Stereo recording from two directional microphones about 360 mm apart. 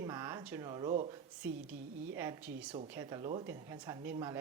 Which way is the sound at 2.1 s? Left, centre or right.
Centre.